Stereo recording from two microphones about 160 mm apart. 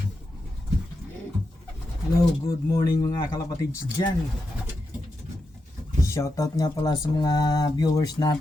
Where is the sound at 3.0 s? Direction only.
20° left (ahead or behind).